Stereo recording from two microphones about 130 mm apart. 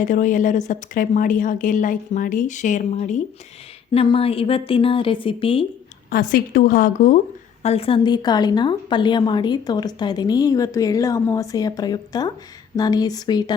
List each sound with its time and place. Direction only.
0.0 s a woman's voice: 85° left; by 3.2 s 70° left (ahead or behind)
3.9 s a woman's voice: 45° left (ahead or behind)
6.1 s speech: 90° left
7.6 s a woman's voice: 50° left (ahead or behind); by 13.4 s 30° left (ahead or behind)